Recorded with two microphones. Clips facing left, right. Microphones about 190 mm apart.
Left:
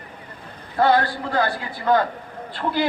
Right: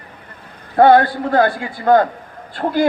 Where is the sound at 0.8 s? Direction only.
55° right (ahead or behind).